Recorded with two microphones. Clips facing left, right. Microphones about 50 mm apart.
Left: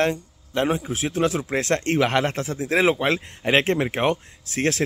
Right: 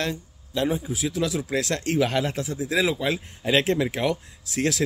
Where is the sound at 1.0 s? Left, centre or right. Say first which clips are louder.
Left 3 dB; left.